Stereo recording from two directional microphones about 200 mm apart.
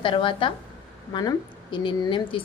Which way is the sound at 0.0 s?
25° left (ahead or behind).